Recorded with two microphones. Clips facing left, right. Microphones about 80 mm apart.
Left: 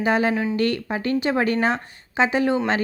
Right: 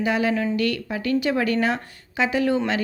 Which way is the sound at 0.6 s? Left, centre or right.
Left.